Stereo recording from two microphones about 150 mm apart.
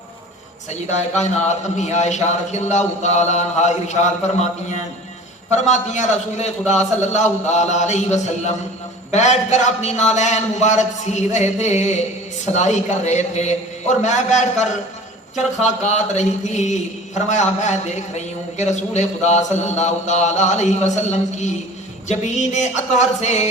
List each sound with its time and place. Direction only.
0.7 s speech: 50° left (ahead or behind)
15.8 s speech: 50° left (ahead or behind)